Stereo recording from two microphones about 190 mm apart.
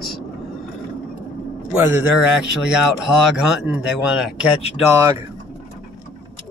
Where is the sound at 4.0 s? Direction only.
5° right (ahead or behind).